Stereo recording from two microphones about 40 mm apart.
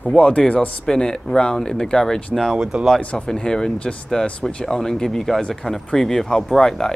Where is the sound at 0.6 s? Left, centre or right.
Left.